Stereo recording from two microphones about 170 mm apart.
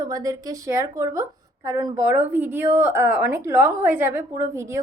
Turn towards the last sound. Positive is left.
turn(degrees=-15)  # may be behind; listen again after turning